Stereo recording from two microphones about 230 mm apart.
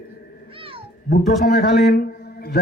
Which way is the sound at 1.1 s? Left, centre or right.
Left.